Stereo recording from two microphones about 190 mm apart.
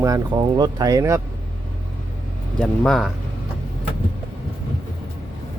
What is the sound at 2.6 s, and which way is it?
Speech, 5° left (ahead or behind).